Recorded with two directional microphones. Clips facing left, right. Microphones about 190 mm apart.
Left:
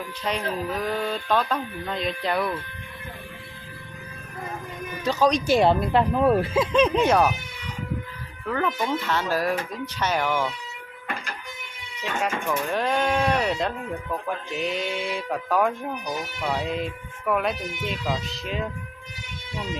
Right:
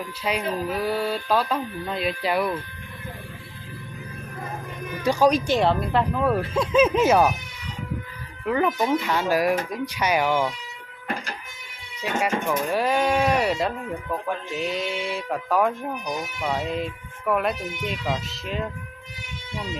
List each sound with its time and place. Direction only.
0.3 s speech: 10° right (ahead or behind)
5.0 s speech: 10° right (ahead or behind)
5.5 s speech: 10° left (ahead or behind)
6.5 s speech: centre (ahead or behind)
8.4 s speech: 15° right (ahead or behind)
12.0 s speech: 10° right (ahead or behind)